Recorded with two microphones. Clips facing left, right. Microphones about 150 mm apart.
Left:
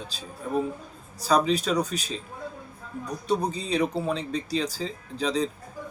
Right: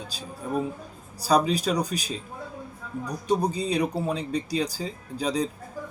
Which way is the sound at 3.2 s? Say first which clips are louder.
Right 2 dB; 10° right (ahead or behind).